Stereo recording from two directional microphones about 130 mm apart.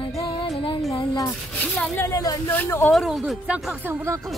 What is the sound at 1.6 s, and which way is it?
Speech, 15° left (ahead or behind).